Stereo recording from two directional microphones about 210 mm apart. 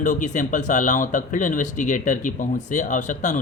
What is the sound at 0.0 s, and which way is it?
Speech, 35° left (ahead or behind).